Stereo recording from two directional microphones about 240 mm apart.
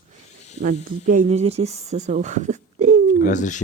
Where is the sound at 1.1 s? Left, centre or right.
Right.